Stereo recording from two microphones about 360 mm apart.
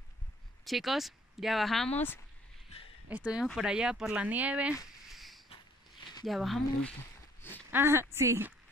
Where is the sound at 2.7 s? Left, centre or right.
Centre.